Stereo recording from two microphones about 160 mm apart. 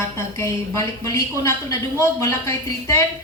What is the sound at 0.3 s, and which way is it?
A woman's voice, 20° left (ahead or behind).